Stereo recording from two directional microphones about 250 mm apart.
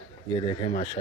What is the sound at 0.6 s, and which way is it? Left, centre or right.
Speech, left.